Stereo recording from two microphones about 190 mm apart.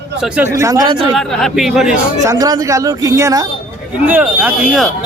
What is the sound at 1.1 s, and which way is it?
Speech, centre (ahead or behind).